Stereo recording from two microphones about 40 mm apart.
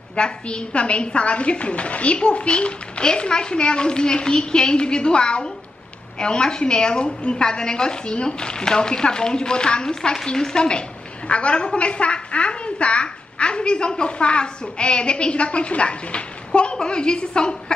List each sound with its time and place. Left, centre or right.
0.1 s a woman's voice: left